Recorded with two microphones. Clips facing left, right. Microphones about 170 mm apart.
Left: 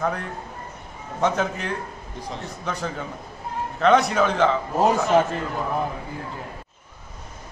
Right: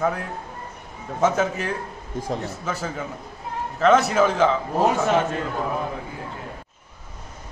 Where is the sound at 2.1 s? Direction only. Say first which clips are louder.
Right 7 dB; 45° right (ahead or behind).